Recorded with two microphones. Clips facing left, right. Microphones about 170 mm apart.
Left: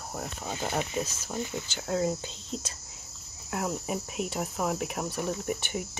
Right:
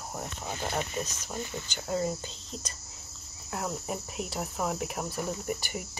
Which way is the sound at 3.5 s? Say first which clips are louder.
Left 3 dB; 5° left (ahead or behind).